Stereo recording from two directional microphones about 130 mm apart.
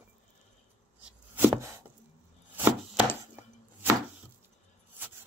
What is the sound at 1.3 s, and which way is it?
Chopping, 15° right (ahead or behind).